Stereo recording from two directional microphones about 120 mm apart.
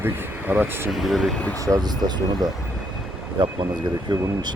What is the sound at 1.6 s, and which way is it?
Speech, 30° right (ahead or behind).